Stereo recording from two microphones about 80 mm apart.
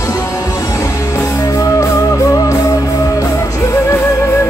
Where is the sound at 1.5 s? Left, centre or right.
Left.